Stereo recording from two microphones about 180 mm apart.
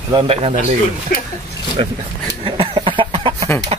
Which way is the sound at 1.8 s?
30° right (ahead or behind).